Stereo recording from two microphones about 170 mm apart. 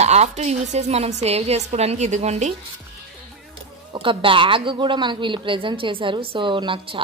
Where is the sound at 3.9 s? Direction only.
30° right (ahead or behind).